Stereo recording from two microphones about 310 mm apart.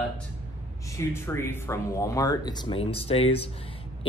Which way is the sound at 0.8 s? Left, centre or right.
Centre.